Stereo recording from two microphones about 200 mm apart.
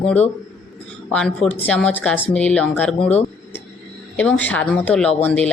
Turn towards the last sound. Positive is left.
turn(degrees=5)  # may be behind; listen again after turning